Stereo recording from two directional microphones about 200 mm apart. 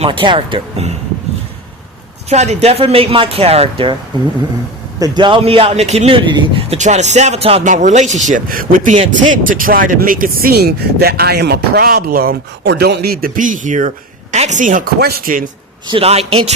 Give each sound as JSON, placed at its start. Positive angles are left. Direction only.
{"t": 0.0, "sound": "speech", "side_deg": -25}
{"t": 2.3, "sound": "speech", "side_deg": -35}
{"t": 4.9, "sound": "speech", "side_deg": -20}
{"t": 15.9, "sound": "speech", "side_deg": -30}